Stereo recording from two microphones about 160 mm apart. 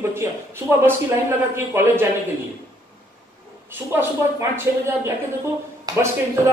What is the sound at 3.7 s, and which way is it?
Speech, 15° right (ahead or behind).